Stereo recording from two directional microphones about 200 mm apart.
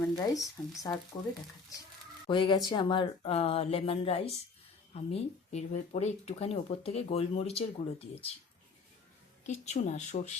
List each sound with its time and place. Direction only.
0.0 s speech: 15° left (ahead or behind)
2.2 s speech: 25° left (ahead or behind)
9.5 s speech: 35° left (ahead or behind)